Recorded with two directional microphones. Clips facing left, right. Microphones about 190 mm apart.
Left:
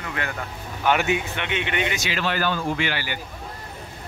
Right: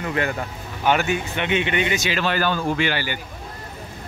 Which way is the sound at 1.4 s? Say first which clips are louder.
Right 4 dB; 35° right (ahead or behind).